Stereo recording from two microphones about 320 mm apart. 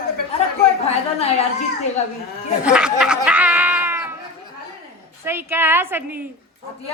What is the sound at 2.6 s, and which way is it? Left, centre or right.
Speech, centre.